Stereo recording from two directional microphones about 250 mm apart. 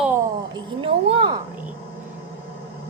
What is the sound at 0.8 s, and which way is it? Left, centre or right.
Speech, right.